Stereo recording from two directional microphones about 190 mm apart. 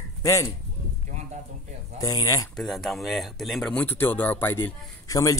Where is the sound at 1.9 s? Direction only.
15° left (ahead or behind).